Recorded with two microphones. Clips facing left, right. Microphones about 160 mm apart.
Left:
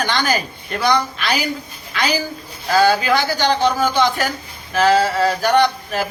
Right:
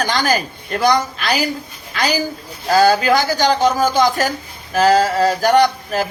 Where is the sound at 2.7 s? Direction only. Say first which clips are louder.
Right 2 dB; 40° right (ahead or behind).